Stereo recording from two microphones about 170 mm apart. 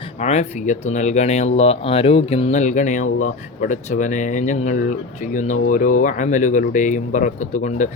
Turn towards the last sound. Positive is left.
turn(degrees=45)  # may be behind; listen again after turning